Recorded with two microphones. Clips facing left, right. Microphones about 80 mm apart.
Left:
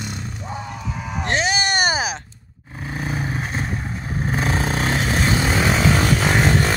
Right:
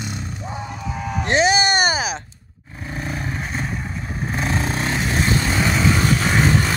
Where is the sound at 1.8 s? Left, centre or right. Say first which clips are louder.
Even; centre.